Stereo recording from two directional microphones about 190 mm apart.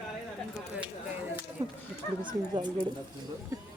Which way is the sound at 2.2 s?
25° right (ahead or behind).